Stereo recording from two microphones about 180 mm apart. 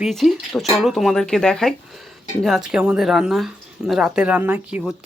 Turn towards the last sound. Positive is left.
turn(degrees=-5)  # may be behind; listen again after turning